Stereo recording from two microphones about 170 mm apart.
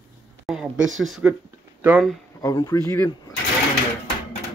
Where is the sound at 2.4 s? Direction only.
20° left (ahead or behind).